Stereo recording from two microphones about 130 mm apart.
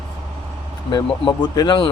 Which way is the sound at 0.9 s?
35° left (ahead or behind).